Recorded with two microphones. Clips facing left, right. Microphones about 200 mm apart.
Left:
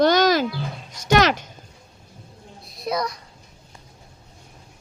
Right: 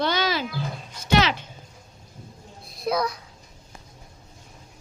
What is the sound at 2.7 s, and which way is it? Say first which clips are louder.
Speech: right 1 dB; centre (ahead or behind).